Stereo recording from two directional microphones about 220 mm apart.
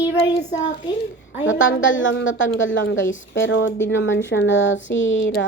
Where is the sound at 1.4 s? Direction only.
55° left (ahead or behind).